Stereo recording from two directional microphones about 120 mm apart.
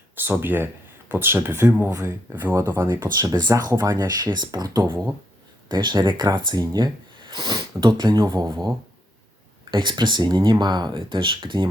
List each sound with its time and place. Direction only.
0.2 s speech: 15° right (ahead or behind)
2.3 s speech: 15° right (ahead or behind)
3.2 s speech: 35° right (ahead or behind)
9.7 s speech: 40° right (ahead or behind)